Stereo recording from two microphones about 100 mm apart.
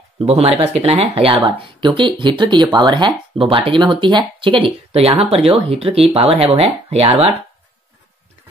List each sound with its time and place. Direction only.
0.2 s speech: 90° right; by 3.1 s 45° right (ahead or behind)
3.3 s speech: 60° right (ahead or behind); by 7.3 s 80° right